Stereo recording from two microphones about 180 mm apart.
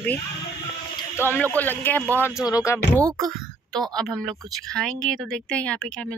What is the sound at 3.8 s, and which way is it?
Speech, 20° right (ahead or behind).